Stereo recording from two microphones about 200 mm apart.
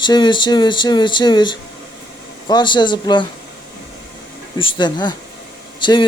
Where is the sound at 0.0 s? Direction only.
25° left (ahead or behind).